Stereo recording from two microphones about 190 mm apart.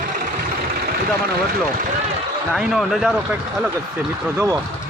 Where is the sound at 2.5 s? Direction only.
Centre (ahead or behind).